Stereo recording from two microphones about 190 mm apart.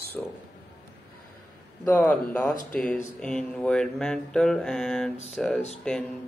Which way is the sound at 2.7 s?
5° left (ahead or behind).